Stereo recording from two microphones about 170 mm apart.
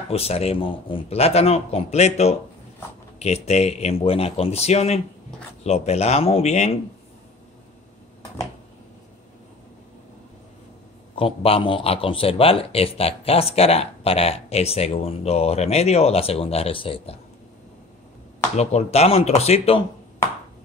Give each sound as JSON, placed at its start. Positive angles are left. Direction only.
{"t": 0.1, "sound": "a man's voice", "side_deg": 35}
{"t": 11.1, "sound": "a man's voice", "side_deg": 35}
{"t": 18.6, "sound": "a man's voice", "side_deg": 40}